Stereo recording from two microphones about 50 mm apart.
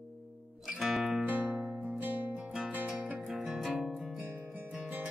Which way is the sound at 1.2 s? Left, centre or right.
Right.